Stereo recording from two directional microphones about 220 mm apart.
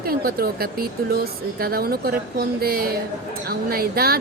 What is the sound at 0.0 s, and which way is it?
A woman's voice, 45° right (ahead or behind).